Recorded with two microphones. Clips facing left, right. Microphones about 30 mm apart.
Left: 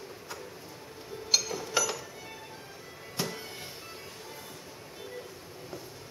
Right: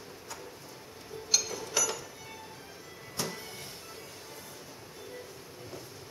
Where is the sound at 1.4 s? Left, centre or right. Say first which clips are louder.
Left 2 dB; centre.